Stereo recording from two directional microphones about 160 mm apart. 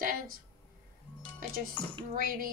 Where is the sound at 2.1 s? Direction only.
60° right (ahead or behind).